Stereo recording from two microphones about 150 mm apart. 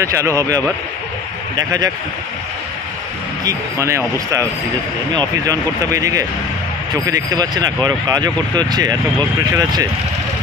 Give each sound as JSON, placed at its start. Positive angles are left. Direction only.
{"t": 0.0, "sound": "speech", "side_deg": -20}
{"t": 3.4, "sound": "speech", "side_deg": -20}